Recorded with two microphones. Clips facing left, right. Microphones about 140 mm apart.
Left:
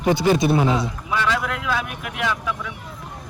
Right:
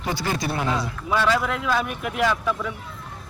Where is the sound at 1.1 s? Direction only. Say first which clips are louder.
Right 2 dB; centre (ahead or behind).